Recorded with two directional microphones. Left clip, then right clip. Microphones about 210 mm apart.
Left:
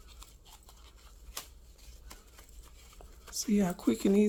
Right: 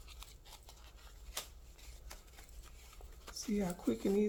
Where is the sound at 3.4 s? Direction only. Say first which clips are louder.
Left 7 dB; 40° left (ahead or behind).